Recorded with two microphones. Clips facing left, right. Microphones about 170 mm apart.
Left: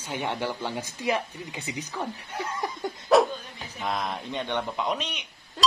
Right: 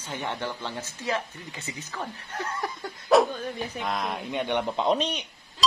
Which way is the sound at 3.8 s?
Centre (ahead or behind).